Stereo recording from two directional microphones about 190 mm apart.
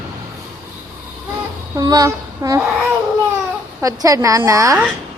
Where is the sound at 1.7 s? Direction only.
20° right (ahead or behind).